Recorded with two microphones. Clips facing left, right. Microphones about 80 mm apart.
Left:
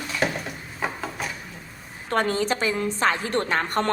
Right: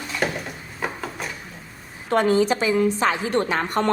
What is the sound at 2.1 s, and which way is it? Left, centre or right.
A woman's voice, left.